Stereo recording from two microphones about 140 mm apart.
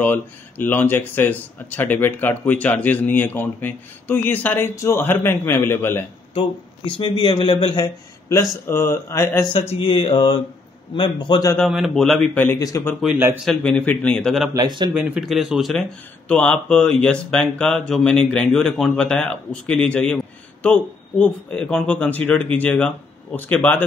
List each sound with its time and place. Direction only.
0.0 s speech: 15° left (ahead or behind)
6.3 s speech: 40° left (ahead or behind); by 9.5 s 20° left (ahead or behind)
9.5 s speech: 45° left (ahead or behind)
11.5 s speech: centre (ahead or behind)
12.4 s speech: 25° left (ahead or behind)
13.5 s speech: 5° left (ahead or behind)
14.5 s speech: 30° right (ahead or behind)
15.0 s speech: 5° right (ahead or behind); by 23.8 s 10° left (ahead or behind)